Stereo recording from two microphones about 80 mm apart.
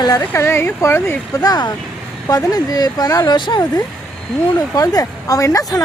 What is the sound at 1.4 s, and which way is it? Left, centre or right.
Speech, left.